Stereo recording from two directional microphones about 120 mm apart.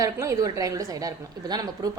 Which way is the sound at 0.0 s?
25° right (ahead or behind).